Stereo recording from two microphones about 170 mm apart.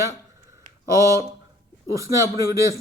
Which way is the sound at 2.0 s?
20° right (ahead or behind).